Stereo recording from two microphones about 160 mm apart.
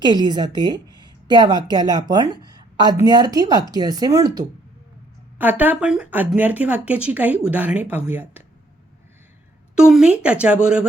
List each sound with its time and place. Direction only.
0.0 s a woman's voice: 25° right (ahead or behind)
1.0 s a sound: 25° right (ahead or behind)
1.7 s a woman's voice: 25° right (ahead or behind)
5.4 s speech: 10° right (ahead or behind)
9.7 s speech: 5° right (ahead or behind)